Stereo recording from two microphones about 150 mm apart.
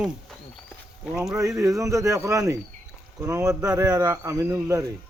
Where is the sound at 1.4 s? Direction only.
20° right (ahead or behind).